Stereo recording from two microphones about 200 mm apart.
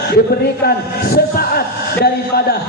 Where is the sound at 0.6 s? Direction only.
50° left (ahead or behind).